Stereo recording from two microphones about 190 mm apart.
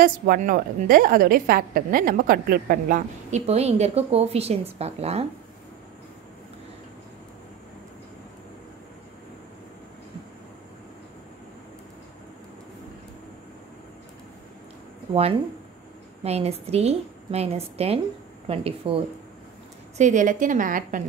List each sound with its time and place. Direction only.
0.0 s a woman's voice: 50° right (ahead or behind)
16.3 s a woman's voice: 35° right (ahead or behind)
20.0 s a woman's voice: 40° right (ahead or behind)